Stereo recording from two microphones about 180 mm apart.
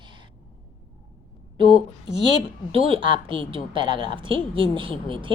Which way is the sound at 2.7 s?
30° right (ahead or behind).